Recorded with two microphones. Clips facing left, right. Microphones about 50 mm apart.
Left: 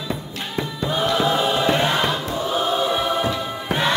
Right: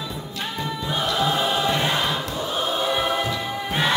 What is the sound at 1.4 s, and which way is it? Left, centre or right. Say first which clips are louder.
Choir: left 3 dB; centre.